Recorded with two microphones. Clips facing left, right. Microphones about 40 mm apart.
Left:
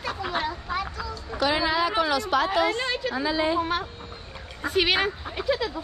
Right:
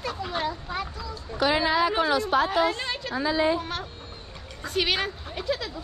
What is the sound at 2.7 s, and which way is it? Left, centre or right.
Speech, centre.